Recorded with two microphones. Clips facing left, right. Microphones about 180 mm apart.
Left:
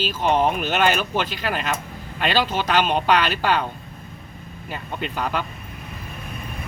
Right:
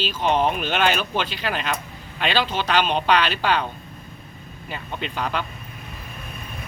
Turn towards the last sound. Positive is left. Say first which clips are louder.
# left 1 dB
turn(degrees=10)  # may be behind; listen again after turning